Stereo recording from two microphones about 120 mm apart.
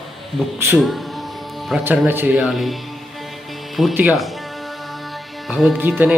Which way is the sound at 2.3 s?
Centre (ahead or behind).